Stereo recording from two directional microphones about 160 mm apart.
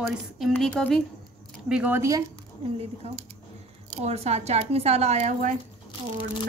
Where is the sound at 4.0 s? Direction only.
40° right (ahead or behind).